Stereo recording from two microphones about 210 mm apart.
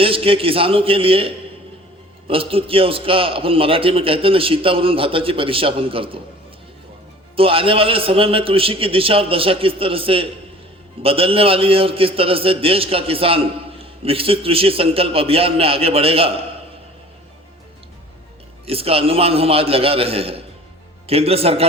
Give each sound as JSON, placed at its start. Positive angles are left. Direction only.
{"t": 0.0, "sound": "a man's voice", "side_deg": -25}
{"t": 7.3, "sound": "a man's voice", "side_deg": -25}
{"t": 18.6, "sound": "a man's voice", "side_deg": -25}